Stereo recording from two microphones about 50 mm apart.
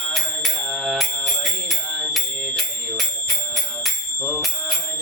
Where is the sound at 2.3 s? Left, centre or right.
Centre.